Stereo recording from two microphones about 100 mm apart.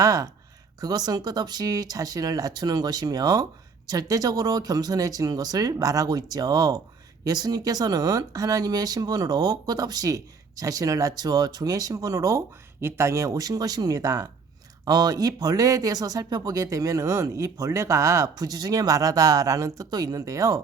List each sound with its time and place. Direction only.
0.0 s speech: 35° right (ahead or behind)